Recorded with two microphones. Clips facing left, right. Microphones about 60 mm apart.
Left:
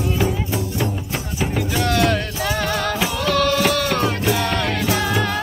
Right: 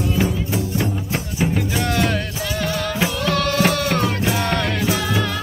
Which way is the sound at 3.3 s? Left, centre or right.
Right.